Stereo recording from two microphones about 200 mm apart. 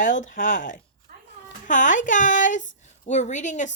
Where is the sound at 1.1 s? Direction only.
50° right (ahead or behind).